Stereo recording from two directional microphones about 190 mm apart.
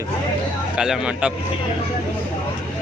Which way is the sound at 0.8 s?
5° right (ahead or behind).